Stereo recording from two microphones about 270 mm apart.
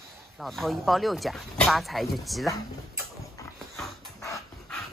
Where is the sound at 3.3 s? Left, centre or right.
Centre.